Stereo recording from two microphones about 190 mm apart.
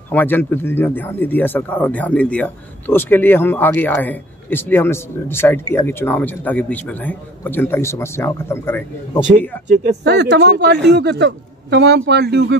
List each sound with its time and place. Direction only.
0.1 s speech: 10° left (ahead or behind)
10.0 s a man's voice: 60° right (ahead or behind)